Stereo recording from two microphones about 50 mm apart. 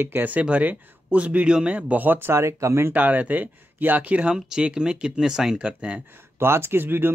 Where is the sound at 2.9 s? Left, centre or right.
Right.